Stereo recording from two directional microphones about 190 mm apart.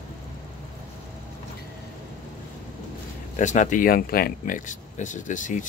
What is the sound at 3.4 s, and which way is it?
Speech, 40° left (ahead or behind).